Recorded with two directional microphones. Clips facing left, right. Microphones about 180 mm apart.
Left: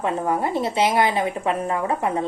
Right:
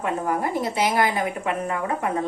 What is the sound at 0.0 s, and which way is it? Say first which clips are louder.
A woman's voice: left 2 dB; 25° left (ahead or behind).